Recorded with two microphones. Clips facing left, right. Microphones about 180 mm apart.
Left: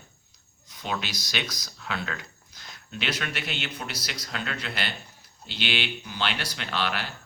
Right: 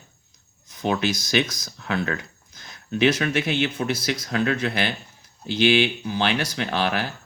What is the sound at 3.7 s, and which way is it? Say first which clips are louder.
Speech: right 11 dB; 50° right (ahead or behind).